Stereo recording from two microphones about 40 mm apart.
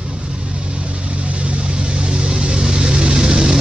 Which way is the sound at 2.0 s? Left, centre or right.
Right.